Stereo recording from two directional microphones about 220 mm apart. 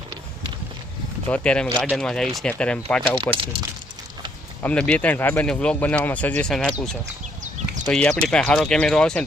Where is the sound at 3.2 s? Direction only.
20° right (ahead or behind).